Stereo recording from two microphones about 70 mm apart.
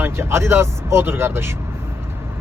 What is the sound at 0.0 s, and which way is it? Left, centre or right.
Speech, right.